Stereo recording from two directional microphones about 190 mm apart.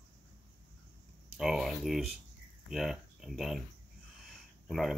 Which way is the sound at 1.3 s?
Centre (ahead or behind).